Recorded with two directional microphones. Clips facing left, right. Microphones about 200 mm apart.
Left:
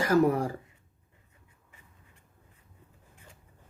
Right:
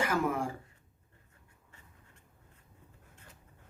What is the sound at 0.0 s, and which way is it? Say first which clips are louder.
Speech: left 7 dB; 40° left (ahead or behind).